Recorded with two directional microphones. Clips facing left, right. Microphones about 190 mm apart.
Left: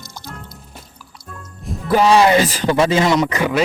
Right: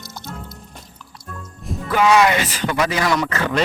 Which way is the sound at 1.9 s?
30° left (ahead or behind).